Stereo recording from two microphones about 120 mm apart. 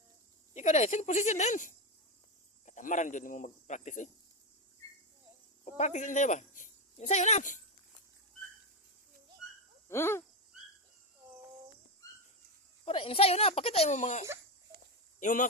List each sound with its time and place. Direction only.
0.5 s speech: 70° left (ahead or behind)
5.6 s speech: 75° left (ahead or behind)
9.4 s a sound: 5° right (ahead or behind)
9.9 s owl: 20° left (ahead or behind)
12.0 s dog: 30° left (ahead or behind)
12.8 s speech: 50° left (ahead or behind); by 15.4 s 90° left